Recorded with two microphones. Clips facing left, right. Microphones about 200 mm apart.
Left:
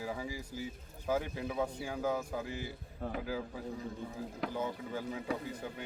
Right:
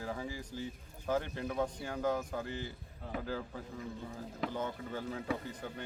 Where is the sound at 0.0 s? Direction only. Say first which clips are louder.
Left 1 dB; 10° left (ahead or behind).